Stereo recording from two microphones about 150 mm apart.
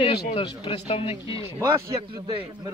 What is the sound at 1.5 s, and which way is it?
Speech, 15° right (ahead or behind).